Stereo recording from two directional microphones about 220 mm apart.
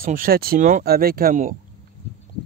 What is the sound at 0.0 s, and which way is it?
A man's voice, 40° right (ahead or behind).